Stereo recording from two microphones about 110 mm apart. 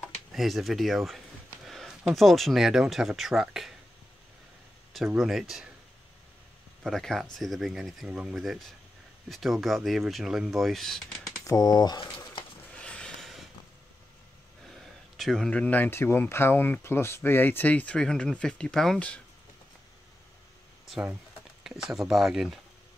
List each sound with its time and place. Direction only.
0.0 s speech: centre (ahead or behind)
4.9 s speech: 5° right (ahead or behind)
6.8 s speech: 5° left (ahead or behind)
11.4 s speech: 35° left (ahead or behind)
12.7 s a sound: 10° left (ahead or behind)
14.7 s speech: centre (ahead or behind)
21.6 s speech: 5° right (ahead or behind)